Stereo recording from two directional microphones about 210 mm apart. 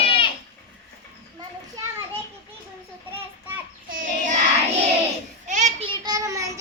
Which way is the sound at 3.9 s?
40° right (ahead or behind).